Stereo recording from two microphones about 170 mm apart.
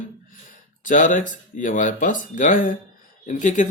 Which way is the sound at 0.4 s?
50° left (ahead or behind).